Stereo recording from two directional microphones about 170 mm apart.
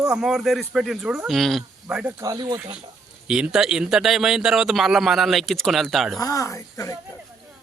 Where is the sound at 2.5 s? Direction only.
10° right (ahead or behind).